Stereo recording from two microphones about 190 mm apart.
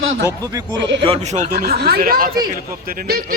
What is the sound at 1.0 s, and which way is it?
A man's voice, 35° right (ahead or behind).